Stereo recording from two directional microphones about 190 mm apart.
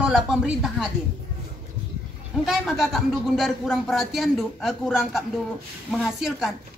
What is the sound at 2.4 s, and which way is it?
Speech, centre (ahead or behind).